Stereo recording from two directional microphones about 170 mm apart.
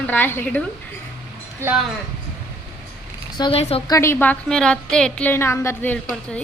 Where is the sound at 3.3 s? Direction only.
30° left (ahead or behind).